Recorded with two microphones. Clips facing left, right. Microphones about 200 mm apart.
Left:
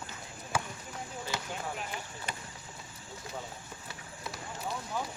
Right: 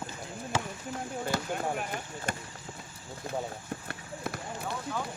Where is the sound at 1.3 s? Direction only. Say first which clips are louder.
Right 7 dB; 55° right (ahead or behind).